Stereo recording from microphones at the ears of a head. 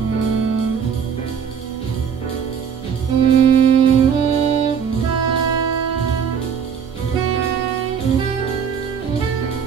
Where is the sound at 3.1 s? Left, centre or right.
Right.